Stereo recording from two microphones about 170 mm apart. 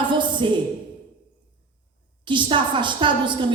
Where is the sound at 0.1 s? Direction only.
30° right (ahead or behind).